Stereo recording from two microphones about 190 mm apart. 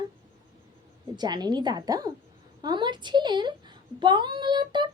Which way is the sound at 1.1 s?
20° right (ahead or behind).